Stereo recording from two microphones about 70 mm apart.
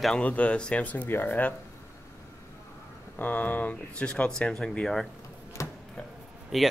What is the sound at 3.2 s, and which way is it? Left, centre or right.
Speech, left.